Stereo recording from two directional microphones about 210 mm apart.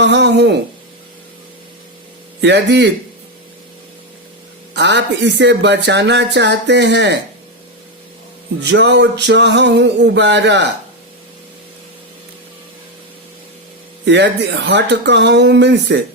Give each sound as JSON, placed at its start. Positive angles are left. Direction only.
{"t": 0.0, "sound": "speech", "side_deg": -55}
{"t": 2.4, "sound": "speech", "side_deg": -55}
{"t": 4.7, "sound": "speech", "side_deg": -55}
{"t": 8.6, "sound": "speech", "side_deg": -55}
{"t": 14.0, "sound": "speech", "side_deg": -55}